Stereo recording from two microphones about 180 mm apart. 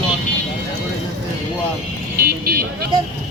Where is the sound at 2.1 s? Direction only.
55° right (ahead or behind).